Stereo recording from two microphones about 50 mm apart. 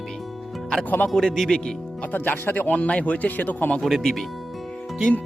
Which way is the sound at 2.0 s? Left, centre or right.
Left.